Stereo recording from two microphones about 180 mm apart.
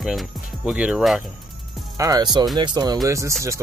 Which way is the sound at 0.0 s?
Centre (ahead or behind).